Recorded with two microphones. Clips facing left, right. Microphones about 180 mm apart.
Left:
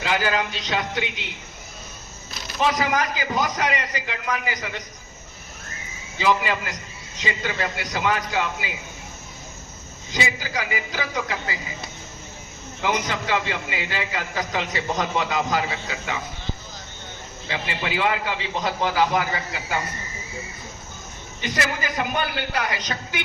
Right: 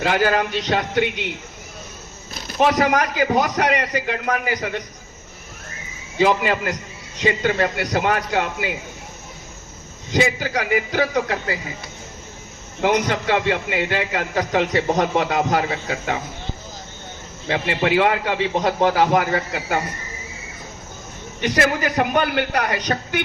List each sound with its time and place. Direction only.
0.0 s a man's voice: 50° right (ahead or behind)
2.3 s a man's voice: 60° right (ahead or behind)
6.1 s a man's voice: 50° right (ahead or behind)
10.1 s a man's voice: 55° right (ahead or behind)
12.8 s a man's voice: 55° right (ahead or behind)
17.5 s a man's voice: 55° right (ahead or behind)
21.4 s a man's voice: 65° right (ahead or behind)